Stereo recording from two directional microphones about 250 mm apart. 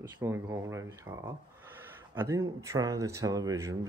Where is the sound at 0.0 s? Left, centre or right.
Centre.